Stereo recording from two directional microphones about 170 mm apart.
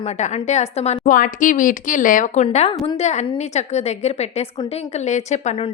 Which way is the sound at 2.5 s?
35° left (ahead or behind).